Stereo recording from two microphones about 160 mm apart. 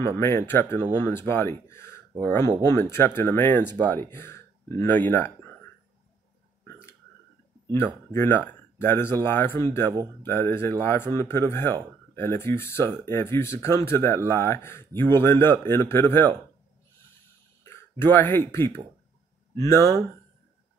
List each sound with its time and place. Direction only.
0.0 s speech: 15° left (ahead or behind)
6.6 s burping: 15° left (ahead or behind)
7.7 s speech: 15° left (ahead or behind)
17.6 s speech: 10° left (ahead or behind)